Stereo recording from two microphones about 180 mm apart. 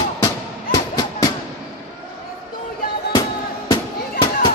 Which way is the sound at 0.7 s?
20° left (ahead or behind).